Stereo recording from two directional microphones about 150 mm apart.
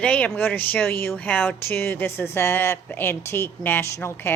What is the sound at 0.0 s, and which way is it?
A woman's voice, 10° left (ahead or behind).